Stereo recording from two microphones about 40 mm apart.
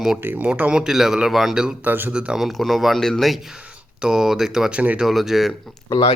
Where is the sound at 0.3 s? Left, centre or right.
Right.